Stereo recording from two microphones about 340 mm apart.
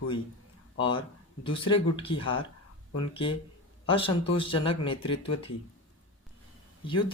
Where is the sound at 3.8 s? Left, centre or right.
Centre.